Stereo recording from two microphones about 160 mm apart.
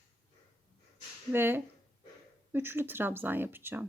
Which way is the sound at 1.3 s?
15° right (ahead or behind).